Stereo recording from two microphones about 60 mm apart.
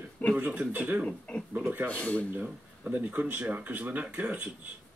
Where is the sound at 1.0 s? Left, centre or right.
Centre.